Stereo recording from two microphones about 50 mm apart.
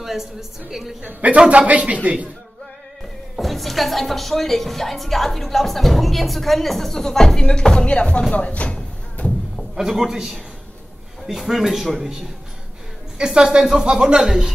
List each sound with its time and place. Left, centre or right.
0.0 s speech: centre
1.0 s speech: right
3.3 s speech: centre; by 8.7 s left
9.1 s music: left
9.8 s speech: centre
13.2 s speech: centre